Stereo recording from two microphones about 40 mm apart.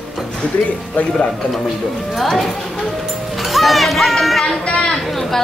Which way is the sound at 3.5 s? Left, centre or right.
Centre.